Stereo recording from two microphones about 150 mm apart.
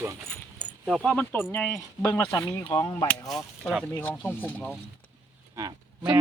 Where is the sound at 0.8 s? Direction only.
Centre (ahead or behind); by 2.8 s 25° left (ahead or behind).